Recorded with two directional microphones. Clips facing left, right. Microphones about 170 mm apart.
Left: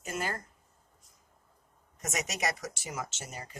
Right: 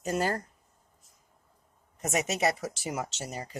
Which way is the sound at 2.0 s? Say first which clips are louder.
Right 6 dB; 30° right (ahead or behind).